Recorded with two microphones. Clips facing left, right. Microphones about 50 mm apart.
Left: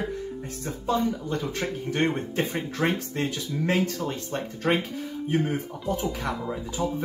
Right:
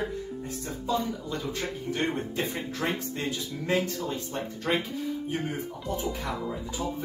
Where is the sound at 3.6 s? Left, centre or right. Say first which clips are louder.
Left 2 dB; left.